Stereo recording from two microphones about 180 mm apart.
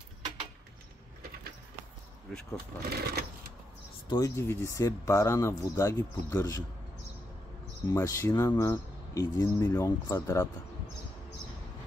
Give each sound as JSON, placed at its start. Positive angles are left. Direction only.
{"t": 2.3, "sound": "speech", "side_deg": 0}
{"t": 2.9, "sound": "sewing machine", "side_deg": -60}
{"t": 4.1, "sound": "speech", "side_deg": 15}
{"t": 7.9, "sound": "speech", "side_deg": 15}